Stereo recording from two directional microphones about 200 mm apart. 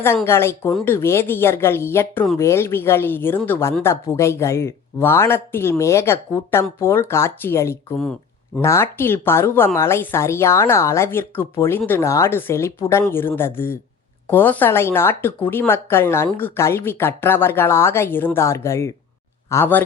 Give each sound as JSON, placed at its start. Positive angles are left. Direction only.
{"t": 0.3, "sound": "speech", "side_deg": 10}